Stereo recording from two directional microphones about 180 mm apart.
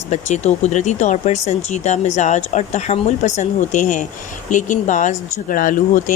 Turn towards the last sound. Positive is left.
turn(degrees=50)  # may be behind; listen again after turning